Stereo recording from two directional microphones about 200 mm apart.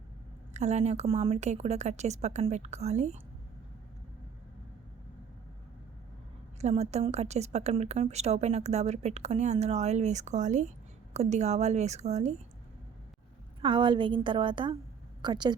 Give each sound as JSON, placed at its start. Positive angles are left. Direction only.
{"t": 0.5, "sound": "a woman's voice", "side_deg": -35}
{"t": 6.6, "sound": "a woman's voice", "side_deg": -35}
{"t": 13.6, "sound": "a woman's voice", "side_deg": -25}